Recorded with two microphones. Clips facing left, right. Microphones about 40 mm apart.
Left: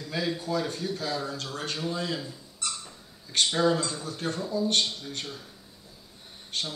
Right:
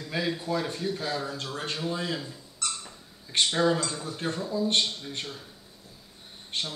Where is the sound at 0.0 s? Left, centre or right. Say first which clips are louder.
Even; centre.